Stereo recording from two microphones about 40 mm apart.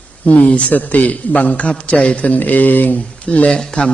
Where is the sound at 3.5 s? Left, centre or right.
Left.